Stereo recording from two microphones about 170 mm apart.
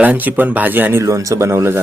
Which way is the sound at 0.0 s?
10° right (ahead or behind).